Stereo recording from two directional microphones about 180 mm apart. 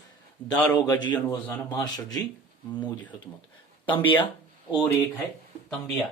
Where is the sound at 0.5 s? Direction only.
5° left (ahead or behind).